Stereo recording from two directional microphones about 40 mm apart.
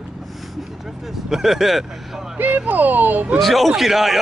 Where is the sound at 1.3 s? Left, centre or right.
Centre.